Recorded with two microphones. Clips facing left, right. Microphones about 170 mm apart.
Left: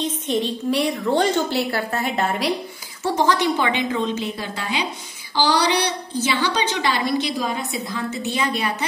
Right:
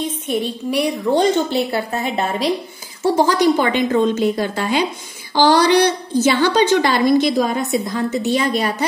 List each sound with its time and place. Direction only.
0.0 s a woman's voice: 10° right (ahead or behind)
3.0 s a woman's voice: 30° right (ahead or behind)